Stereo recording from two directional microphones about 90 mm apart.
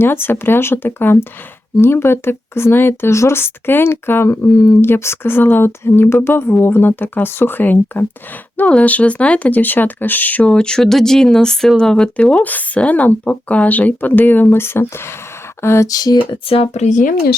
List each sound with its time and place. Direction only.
0.0 s speech: 25° left (ahead or behind)
15.9 s a sound: 45° left (ahead or behind)
16.1 s speech: 80° left